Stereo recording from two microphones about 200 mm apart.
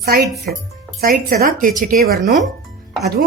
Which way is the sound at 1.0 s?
45° right (ahead or behind).